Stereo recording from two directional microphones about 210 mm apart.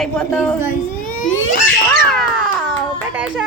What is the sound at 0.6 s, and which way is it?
Speech, 40° left (ahead or behind).